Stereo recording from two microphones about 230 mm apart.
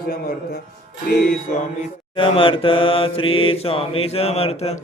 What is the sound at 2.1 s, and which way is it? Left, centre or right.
Mantra, left.